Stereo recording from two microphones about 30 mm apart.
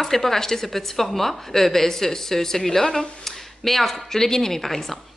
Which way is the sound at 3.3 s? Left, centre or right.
Centre.